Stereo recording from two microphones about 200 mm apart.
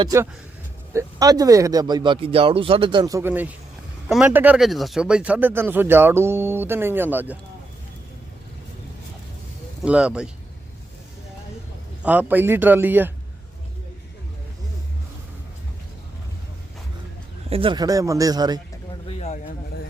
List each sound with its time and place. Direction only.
0.0 s speech: 15° right (ahead or behind)
9.8 s speech: 5° right (ahead or behind)
12.0 s speech: 10° right (ahead or behind)
17.5 s speech: 25° right (ahead or behind)
19.0 s speech: 30° left (ahead or behind)